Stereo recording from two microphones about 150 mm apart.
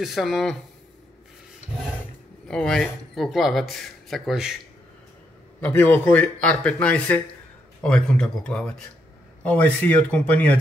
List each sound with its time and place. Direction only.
0.0 s speech: centre (ahead or behind)
2.4 s speech: 5° left (ahead or behind)
5.6 s speech: 10° left (ahead or behind)